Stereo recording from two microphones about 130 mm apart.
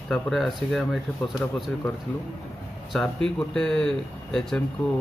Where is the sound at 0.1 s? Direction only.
5° left (ahead or behind).